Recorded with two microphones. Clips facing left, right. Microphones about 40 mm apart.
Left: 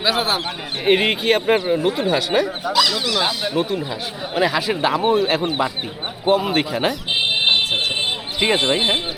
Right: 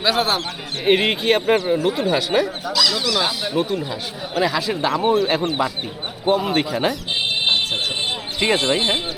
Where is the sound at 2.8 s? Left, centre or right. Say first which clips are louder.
Left 2 dB; left.